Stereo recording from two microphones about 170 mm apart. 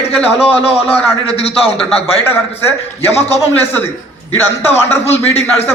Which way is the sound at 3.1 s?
40° left (ahead or behind).